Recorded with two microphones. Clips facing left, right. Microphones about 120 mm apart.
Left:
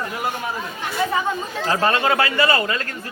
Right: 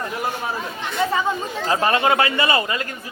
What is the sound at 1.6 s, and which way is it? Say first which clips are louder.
Speech: right 1 dB; 20° right (ahead or behind).